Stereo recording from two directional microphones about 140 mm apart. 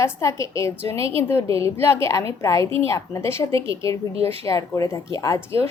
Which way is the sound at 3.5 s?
40° right (ahead or behind).